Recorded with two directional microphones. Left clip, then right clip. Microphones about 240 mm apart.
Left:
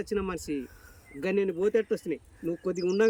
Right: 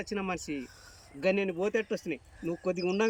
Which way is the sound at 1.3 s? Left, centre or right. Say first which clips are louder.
Left 4 dB; centre.